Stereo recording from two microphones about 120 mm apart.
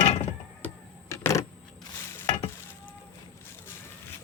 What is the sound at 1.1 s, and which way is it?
Keys jangling, 25° left (ahead or behind).